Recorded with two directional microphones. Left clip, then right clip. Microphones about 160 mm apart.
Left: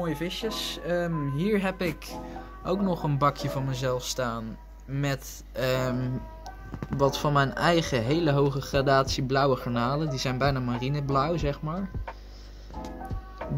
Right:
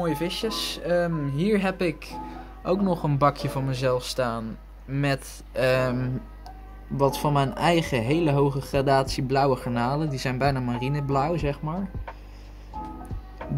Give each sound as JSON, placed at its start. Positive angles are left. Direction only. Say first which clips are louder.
{"t": 0.0, "sound": "speech", "louder": "right 4 dB", "side_deg": 0}
{"t": 8.0, "sound": "speech", "louder": "right 2 dB", "side_deg": -40}
{"t": 8.3, "sound": "speech", "louder": "right 1 dB", "side_deg": -5}